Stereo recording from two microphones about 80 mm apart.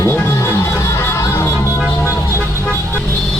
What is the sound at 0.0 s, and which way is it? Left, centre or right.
Music, left.